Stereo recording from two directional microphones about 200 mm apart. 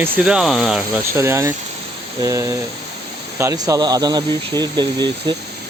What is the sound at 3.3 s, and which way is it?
Speech, 15° right (ahead or behind).